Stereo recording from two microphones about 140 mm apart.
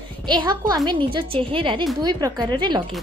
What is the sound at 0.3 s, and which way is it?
A woman's voice, 30° right (ahead or behind).